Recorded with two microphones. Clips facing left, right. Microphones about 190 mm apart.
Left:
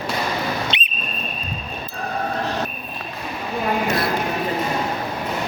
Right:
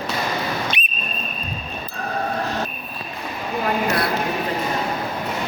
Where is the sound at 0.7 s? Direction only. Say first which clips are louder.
Even; 20° left (ahead or behind).